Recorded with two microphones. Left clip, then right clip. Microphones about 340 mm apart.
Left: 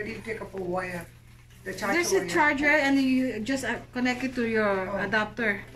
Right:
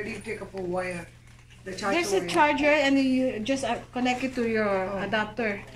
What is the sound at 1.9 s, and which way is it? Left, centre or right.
A woman's voice, centre.